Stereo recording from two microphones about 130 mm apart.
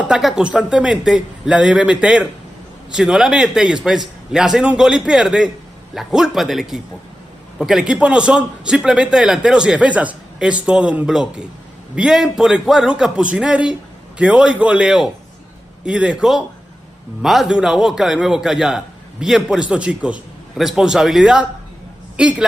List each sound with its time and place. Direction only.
0.1 s a man's voice: 5° right (ahead or behind)